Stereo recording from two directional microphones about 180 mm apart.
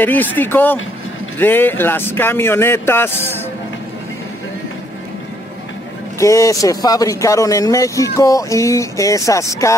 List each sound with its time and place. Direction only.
0.0 s speech: 10° left (ahead or behind)
6.1 s speech: 15° left (ahead or behind)